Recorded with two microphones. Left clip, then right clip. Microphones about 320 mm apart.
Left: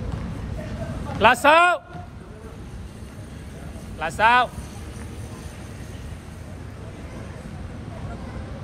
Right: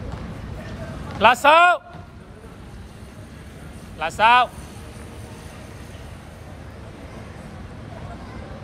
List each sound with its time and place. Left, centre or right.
1.2 s speech: centre
4.0 s speech: centre